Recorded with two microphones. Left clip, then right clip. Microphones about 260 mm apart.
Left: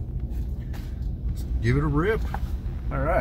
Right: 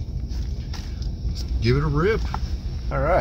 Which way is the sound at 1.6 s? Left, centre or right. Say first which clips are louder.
Right 2 dB; centre.